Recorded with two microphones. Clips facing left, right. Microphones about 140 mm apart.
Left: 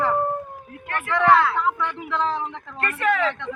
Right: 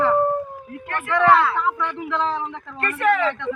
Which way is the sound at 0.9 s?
15° right (ahead or behind).